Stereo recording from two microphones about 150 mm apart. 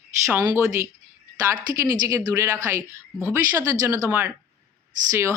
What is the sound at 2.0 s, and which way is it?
Speech, 20° right (ahead or behind).